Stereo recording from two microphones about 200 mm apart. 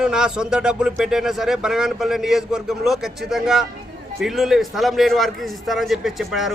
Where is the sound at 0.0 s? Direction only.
5° right (ahead or behind).